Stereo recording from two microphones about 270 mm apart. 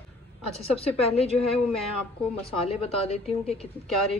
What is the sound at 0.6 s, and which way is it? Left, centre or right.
Speech, left.